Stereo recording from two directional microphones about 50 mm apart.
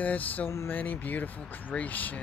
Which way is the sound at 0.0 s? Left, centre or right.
Left.